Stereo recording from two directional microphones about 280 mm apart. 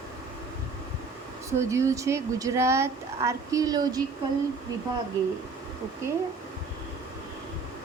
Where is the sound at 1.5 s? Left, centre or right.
Centre.